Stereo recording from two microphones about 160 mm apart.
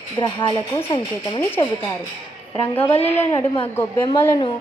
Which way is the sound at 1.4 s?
15° left (ahead or behind).